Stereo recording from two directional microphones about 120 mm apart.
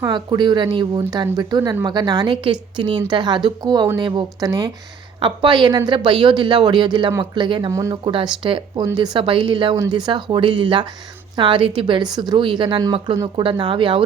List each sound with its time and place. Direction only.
0.0 s speech: 40° right (ahead or behind)
7.7 s speech: 25° right (ahead or behind)
8.0 s speech: 40° right (ahead or behind)